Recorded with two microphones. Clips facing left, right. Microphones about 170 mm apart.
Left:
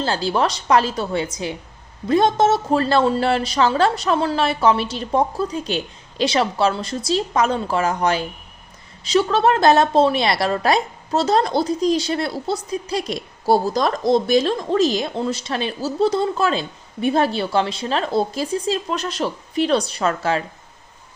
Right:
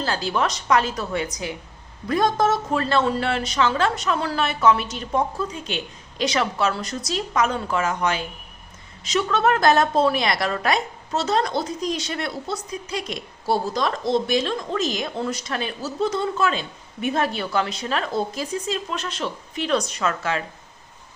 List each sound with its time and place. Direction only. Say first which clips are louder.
0.0 s a woman's voice: left 4 dB; 30° left (ahead or behind)